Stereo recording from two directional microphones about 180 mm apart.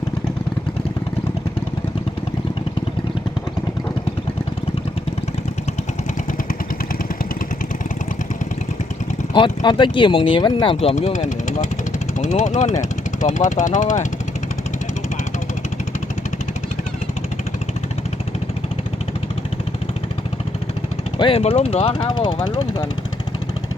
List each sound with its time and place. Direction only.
9.3 s speech: 25° left (ahead or behind); by 14.1 s 45° left (ahead or behind)
21.2 s speech: 30° left (ahead or behind)